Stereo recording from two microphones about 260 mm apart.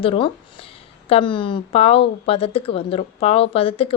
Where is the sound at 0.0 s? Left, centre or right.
Left.